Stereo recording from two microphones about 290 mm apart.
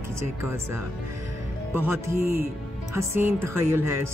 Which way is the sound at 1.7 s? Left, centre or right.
Centre.